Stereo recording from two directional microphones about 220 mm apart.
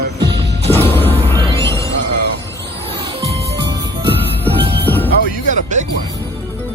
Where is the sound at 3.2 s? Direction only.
30° right (ahead or behind).